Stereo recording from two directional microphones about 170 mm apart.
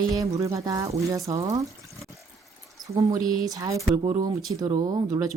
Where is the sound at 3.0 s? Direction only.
20° right (ahead or behind).